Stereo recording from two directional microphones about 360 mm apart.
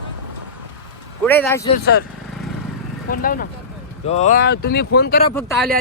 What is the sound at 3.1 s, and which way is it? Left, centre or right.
Speech, left.